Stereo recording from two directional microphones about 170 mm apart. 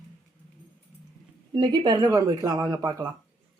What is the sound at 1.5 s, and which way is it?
A woman's voice, 25° right (ahead or behind).